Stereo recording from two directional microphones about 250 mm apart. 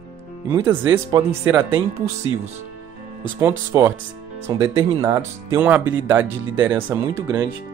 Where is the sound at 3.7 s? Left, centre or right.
Centre.